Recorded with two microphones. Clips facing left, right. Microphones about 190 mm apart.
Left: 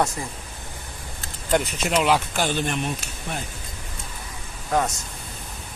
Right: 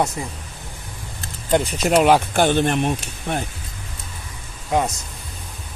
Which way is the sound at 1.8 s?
50° right (ahead or behind).